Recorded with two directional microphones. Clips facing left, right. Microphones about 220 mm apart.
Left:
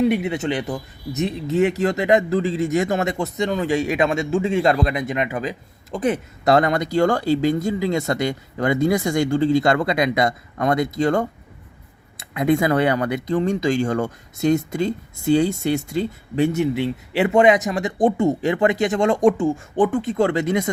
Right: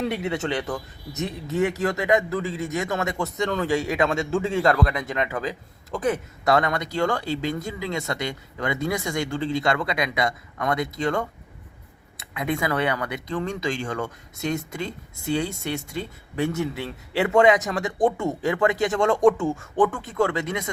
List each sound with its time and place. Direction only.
0.0 s speech: 15° left (ahead or behind); by 20.7 s 35° left (ahead or behind)